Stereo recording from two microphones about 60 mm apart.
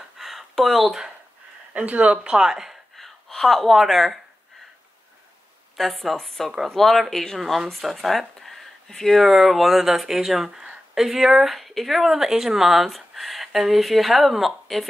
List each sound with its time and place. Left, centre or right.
0.2 s a sound: centre
1.7 s speech: right; by 3.1 s centre
3.3 s speech: centre
5.8 s speech: centre